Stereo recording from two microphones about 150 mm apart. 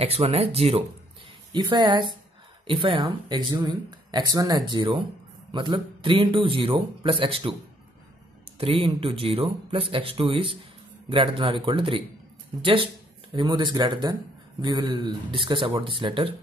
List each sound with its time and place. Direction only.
0.0 s speech: 45° right (ahead or behind)
1.5 s a man's voice: 30° right (ahead or behind)
8.5 s a man's voice: 40° right (ahead or behind)